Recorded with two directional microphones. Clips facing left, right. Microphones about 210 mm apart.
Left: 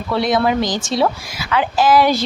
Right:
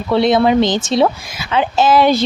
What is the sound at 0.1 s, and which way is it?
Speech, 25° right (ahead or behind).